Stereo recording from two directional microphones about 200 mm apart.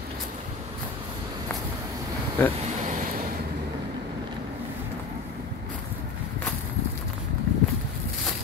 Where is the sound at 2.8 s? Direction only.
40° right (ahead or behind).